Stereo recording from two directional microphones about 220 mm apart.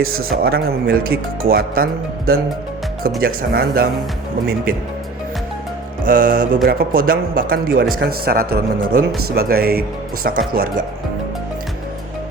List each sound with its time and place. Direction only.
0.0 s a man's voice: 70° right (ahead or behind)
0.4 s speech: 45° right (ahead or behind)
6.1 s speech: 40° right (ahead or behind)